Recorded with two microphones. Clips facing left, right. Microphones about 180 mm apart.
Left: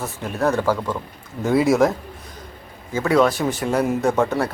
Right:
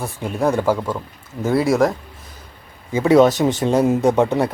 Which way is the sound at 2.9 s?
20° right (ahead or behind).